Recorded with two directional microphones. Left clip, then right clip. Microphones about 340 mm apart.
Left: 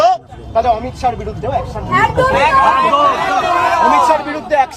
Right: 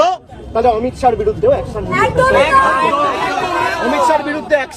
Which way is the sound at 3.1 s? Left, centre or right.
Centre.